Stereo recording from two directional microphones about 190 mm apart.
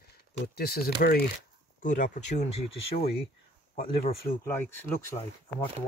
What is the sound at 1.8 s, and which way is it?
Speech, 40° left (ahead or behind).